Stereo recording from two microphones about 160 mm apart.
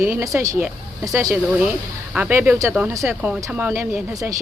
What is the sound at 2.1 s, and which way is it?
Speech, 10° right (ahead or behind).